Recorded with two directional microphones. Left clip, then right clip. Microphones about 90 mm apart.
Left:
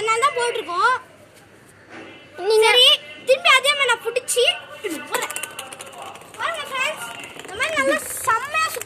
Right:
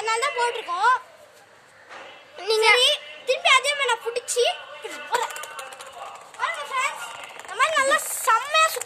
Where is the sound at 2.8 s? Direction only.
35° right (ahead or behind).